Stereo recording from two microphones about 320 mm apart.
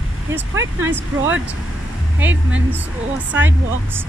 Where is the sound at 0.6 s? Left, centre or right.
Right.